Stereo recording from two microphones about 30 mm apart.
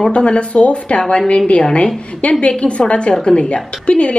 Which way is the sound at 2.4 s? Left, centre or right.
Left.